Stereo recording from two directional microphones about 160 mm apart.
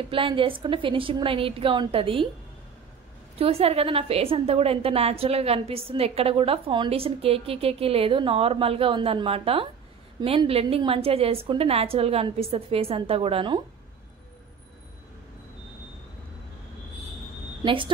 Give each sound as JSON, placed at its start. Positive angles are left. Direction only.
{"t": 0.1, "sound": "a woman's voice", "side_deg": -35}
{"t": 3.3, "sound": "a woman's voice", "side_deg": -40}
{"t": 17.6, "sound": "a woman's voice", "side_deg": -30}